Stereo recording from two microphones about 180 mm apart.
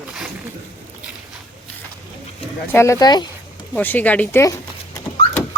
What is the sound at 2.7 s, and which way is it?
Speech, 15° left (ahead or behind).